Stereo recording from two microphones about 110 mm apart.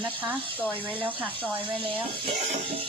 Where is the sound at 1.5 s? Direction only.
15° right (ahead or behind).